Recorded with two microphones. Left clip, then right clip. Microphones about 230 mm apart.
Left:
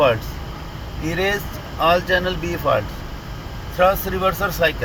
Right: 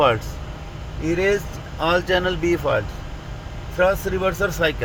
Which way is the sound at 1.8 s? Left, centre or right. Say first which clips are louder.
Left 2 dB; right.